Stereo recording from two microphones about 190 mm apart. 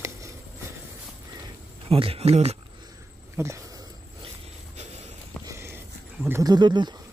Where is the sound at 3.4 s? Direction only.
15° right (ahead or behind).